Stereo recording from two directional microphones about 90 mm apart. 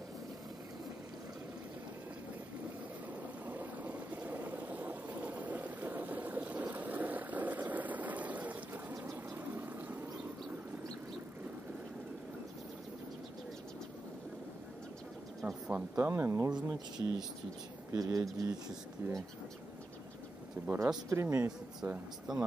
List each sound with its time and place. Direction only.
3.4 s boat: 20° right (ahead or behind)
15.7 s speech: 30° right (ahead or behind)
16.4 s speech: 50° right (ahead or behind)
17.9 s speech: 40° right (ahead or behind)
19.0 s speech: 30° right (ahead or behind)
20.6 s speech: 25° right (ahead or behind)